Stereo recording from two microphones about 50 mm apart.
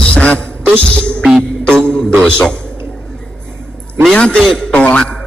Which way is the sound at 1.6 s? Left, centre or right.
Centre.